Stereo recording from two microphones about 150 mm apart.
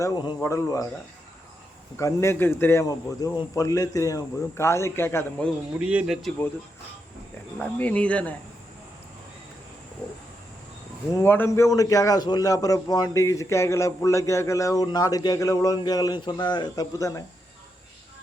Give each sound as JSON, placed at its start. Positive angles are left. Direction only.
{"t": 0.0, "sound": "a man's voice", "side_deg": 25}
{"t": 2.0, "sound": "a man's voice", "side_deg": 20}
{"t": 5.8, "sound": "speech", "side_deg": -5}
{"t": 7.6, "sound": "speech", "side_deg": 10}
{"t": 11.1, "sound": "a man's voice", "side_deg": 15}